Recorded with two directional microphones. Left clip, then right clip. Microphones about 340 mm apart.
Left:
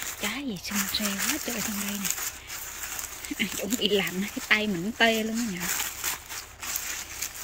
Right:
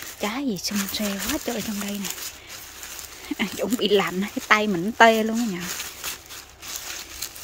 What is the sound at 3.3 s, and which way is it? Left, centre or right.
Speech, centre.